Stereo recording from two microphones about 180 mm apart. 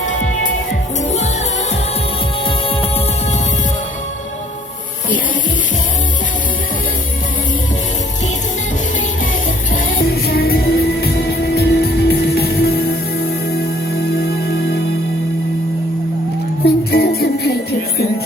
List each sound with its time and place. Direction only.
0.0 s music: 45° left (ahead or behind)
10.1 s music: 60° left (ahead or behind)
16.6 s music: 60° left (ahead or behind)